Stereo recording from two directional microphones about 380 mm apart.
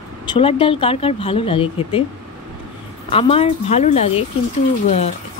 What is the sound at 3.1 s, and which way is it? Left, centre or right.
Speech, centre.